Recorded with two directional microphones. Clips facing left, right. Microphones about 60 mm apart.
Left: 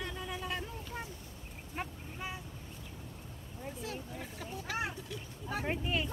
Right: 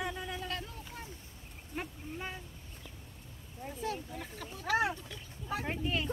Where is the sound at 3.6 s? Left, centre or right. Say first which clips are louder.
Right 4 dB; centre.